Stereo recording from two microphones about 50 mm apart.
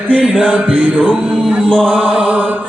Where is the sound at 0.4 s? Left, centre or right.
Right.